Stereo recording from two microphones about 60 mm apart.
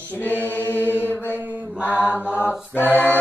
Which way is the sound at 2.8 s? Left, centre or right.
Left.